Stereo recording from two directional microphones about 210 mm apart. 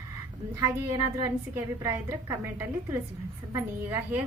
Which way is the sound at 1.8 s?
15° right (ahead or behind).